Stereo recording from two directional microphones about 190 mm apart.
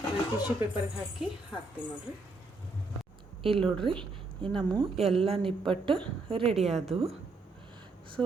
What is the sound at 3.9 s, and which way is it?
A woman's voice, 30° right (ahead or behind).